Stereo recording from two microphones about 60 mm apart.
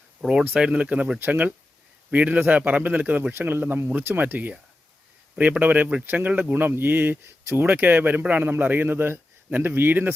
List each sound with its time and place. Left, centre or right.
0.2 s speech: centre
0.5 s a man's voice: right
8.4 s a man's voice: right